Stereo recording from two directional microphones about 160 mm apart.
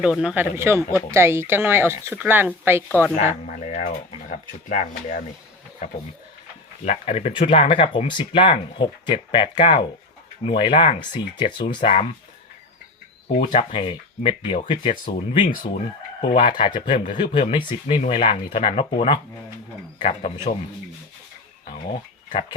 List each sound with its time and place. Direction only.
0.0 s speech: 5° right (ahead or behind)
2.9 s speech: 10° left (ahead or behind)
3.4 s speech: 55° left (ahead or behind)
6.8 s speech: 40° left (ahead or behind)
11.8 s speech: 40° left (ahead or behind)
13.3 s speech: 55° left (ahead or behind)
13.6 s speech: 35° left (ahead or behind)
21.7 s a sound: 55° left (ahead or behind)